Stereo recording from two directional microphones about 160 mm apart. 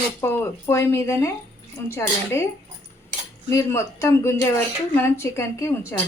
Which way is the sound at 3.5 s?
20° left (ahead or behind).